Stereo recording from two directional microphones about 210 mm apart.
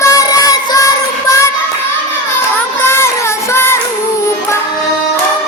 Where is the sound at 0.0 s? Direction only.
15° left (ahead or behind).